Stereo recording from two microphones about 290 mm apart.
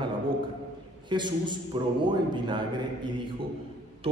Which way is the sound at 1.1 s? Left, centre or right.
Centre.